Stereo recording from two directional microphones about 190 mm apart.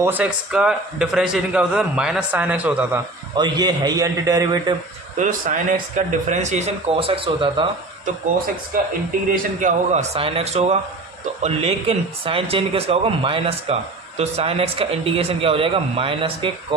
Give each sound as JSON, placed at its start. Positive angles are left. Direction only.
{"t": 0.0, "sound": "a man's voice", "side_deg": -10}
{"t": 3.3, "sound": "speech", "side_deg": -20}
{"t": 5.1, "sound": "speech", "side_deg": -45}
{"t": 9.3, "sound": "speech", "side_deg": -40}